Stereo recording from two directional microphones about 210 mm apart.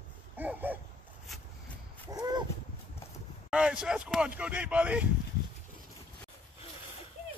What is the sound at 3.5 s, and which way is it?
Speech, 5° right (ahead or behind).